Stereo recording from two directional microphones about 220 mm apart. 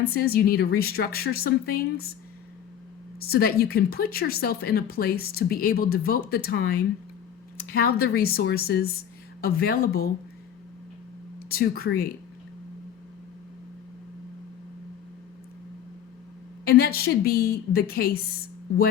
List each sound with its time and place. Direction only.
0.1 s speech: 45° left (ahead or behind)
3.2 s speech: 45° left (ahead or behind)
11.4 s speech: 45° left (ahead or behind)
16.6 s speech: 45° left (ahead or behind)